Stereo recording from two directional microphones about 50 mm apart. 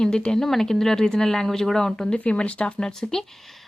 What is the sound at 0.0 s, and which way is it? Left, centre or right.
Speech, centre.